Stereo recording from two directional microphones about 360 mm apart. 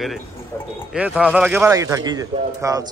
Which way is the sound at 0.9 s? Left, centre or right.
Centre.